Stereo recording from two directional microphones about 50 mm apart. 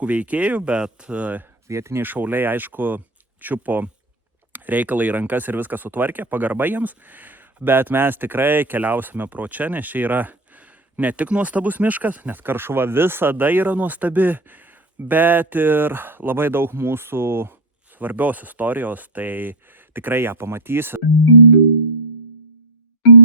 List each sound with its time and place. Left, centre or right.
0.0 s speech: right
1.6 s speech: right
2.0 s speech: right
18.0 s speech: right